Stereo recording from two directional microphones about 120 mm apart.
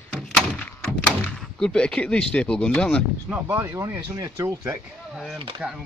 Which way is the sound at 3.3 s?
15° right (ahead or behind).